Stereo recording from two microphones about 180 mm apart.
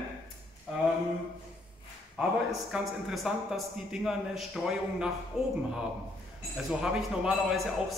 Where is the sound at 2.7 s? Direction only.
5° right (ahead or behind).